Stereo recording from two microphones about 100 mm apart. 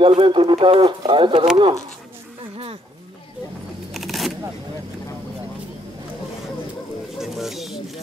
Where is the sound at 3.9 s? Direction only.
Centre (ahead or behind).